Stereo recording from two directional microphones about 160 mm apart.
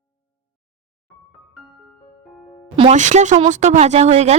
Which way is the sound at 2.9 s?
50° right (ahead or behind).